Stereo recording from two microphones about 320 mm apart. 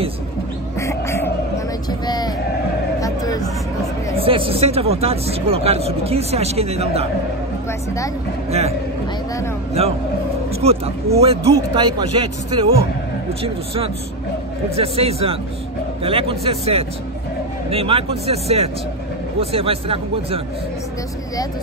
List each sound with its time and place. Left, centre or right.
0.7 s duck: centre
1.9 s a sound: centre
4.2 s speech: centre
8.5 s speech: centre
10.6 s speech: centre
14.8 s speech: centre